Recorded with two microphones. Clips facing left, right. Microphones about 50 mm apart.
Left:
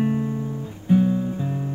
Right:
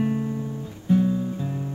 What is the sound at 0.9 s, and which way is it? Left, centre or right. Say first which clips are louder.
Music: left 2 dB; left.